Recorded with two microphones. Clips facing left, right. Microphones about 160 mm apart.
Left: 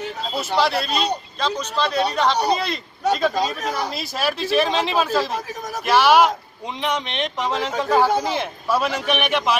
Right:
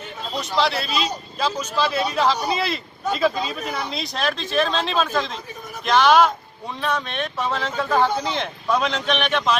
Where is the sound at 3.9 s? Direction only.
5° left (ahead or behind).